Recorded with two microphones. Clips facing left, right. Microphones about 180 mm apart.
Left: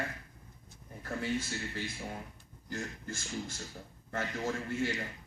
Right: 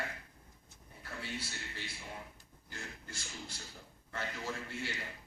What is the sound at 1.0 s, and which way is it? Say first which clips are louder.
Speech: left 9 dB; 45° left (ahead or behind).